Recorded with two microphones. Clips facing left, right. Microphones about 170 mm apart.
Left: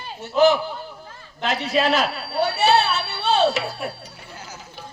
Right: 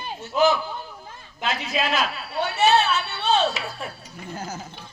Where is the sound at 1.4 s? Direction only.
40° left (ahead or behind).